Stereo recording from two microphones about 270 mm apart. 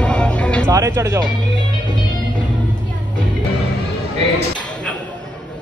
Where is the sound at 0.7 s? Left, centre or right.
Centre.